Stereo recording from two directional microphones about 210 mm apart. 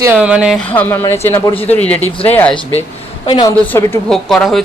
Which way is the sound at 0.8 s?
10° left (ahead or behind).